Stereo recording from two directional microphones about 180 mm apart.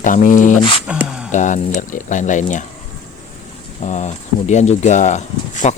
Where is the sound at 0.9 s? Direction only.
5° right (ahead or behind).